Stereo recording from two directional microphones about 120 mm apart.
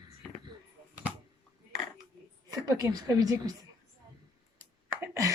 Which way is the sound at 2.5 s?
30° right (ahead or behind).